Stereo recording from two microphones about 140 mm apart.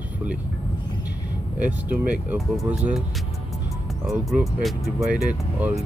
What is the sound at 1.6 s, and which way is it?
Speech, 10° right (ahead or behind).